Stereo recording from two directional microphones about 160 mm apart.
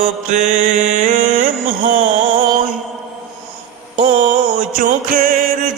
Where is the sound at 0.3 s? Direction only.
50° right (ahead or behind).